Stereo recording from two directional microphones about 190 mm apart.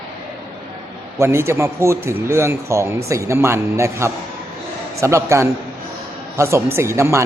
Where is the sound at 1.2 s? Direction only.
15° right (ahead or behind).